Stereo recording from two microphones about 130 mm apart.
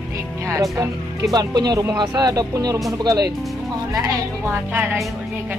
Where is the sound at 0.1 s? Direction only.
25° right (ahead or behind).